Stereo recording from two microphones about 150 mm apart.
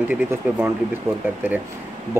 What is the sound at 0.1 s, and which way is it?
Speech, 10° right (ahead or behind).